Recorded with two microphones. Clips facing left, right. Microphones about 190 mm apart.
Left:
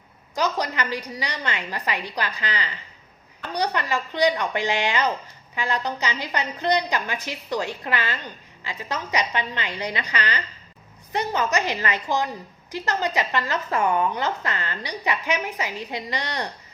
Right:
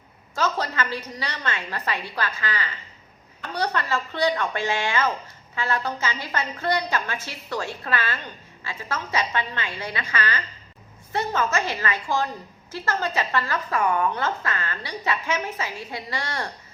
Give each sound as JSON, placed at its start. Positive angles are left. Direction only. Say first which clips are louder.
{"t": 0.3, "sound": "a woman's voice", "louder": "left 1 dB", "side_deg": 15}